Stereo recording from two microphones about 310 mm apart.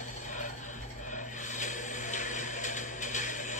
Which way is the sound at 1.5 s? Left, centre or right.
Left.